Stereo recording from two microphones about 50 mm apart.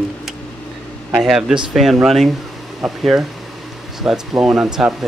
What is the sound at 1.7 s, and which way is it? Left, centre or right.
Speech, centre.